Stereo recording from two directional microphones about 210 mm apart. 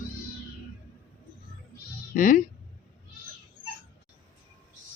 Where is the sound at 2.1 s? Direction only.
40° left (ahead or behind).